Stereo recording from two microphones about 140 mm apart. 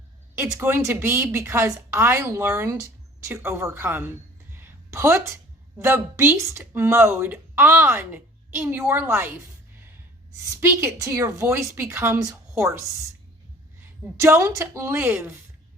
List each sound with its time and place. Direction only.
0.3 s speech: 20° right (ahead or behind)
4.5 s a sound: 15° right (ahead or behind)
5.8 s speech: 15° right (ahead or behind)
10.5 s a woman's voice: 20° right (ahead or behind)
14.2 s speech: 20° right (ahead or behind)